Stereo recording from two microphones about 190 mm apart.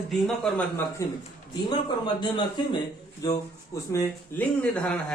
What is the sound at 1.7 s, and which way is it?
Speech, 25° left (ahead or behind).